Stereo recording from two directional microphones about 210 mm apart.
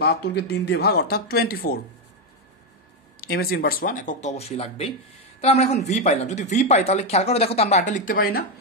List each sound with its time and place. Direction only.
0.0 s speech: 50° left (ahead or behind)
3.2 s speech: 45° left (ahead or behind)